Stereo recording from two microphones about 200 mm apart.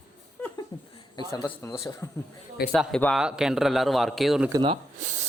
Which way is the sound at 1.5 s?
25° left (ahead or behind).